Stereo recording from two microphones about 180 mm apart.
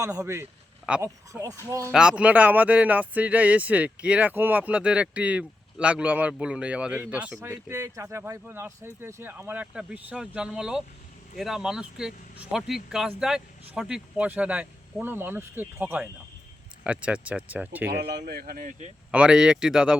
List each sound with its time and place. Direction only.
0.0 s speech: 15° right (ahead or behind)
1.3 s speech: 20° right (ahead or behind)
1.9 s speech: 5° right (ahead or behind)
17.9 s speech: 70° right (ahead or behind)
18.3 s speech: 55° right (ahead or behind)
19.1 s speech: 5° right (ahead or behind)